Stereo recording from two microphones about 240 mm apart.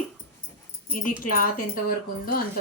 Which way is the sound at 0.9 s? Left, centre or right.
Left.